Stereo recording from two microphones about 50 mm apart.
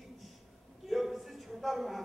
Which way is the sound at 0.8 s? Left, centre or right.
Centre.